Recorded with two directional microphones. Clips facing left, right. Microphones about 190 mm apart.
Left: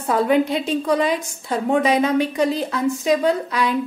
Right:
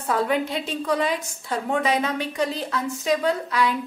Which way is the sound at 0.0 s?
20° left (ahead or behind).